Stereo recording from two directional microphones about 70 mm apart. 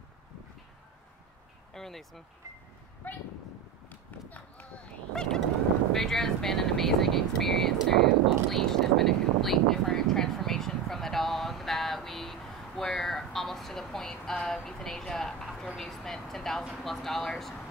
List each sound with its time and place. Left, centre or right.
1.7 s speech: centre
3.0 s speech: left
5.1 s goose: centre
5.9 s speech: centre